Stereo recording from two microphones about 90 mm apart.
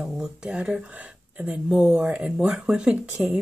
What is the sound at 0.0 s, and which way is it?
Speech, 5° right (ahead or behind).